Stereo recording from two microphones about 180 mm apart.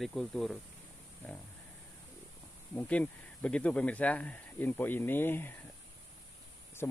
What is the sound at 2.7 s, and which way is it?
Speech, 10° left (ahead or behind).